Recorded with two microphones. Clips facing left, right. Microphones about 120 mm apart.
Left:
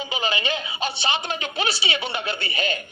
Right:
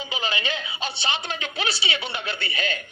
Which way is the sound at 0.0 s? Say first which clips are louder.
Left 3 dB; 50° left (ahead or behind).